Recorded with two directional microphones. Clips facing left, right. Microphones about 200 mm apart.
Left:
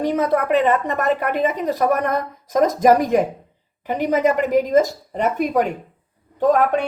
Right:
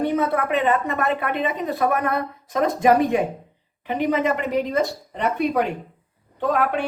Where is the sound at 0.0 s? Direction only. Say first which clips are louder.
Left 2 dB; 40° left (ahead or behind).